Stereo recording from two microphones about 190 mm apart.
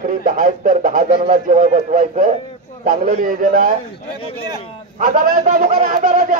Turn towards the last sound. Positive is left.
turn(degrees=-45)  # may be behind; listen again after turning